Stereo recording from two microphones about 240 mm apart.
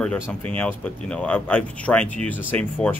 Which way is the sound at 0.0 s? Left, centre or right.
Centre.